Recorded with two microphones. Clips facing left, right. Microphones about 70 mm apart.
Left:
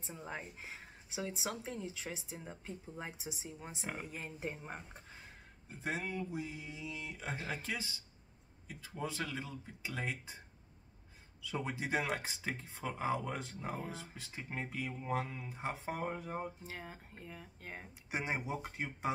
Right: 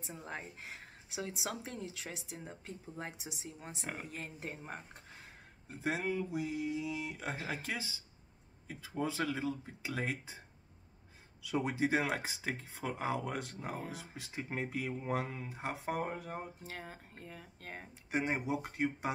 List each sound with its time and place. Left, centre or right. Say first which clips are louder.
0.0 s speech: even; centre
5.8 s speech: right 4 dB; centre
9.0 s speech: right 5 dB; centre
11.9 s speech: right 2 dB; centre
15.4 s speech: right 1 dB; centre